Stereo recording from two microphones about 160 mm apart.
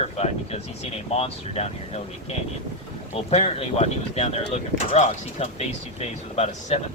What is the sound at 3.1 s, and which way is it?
Speech, 40° left (ahead or behind).